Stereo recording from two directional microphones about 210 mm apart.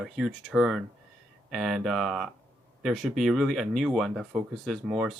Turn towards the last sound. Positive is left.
turn(degrees=0)  # may be behind; listen again after turning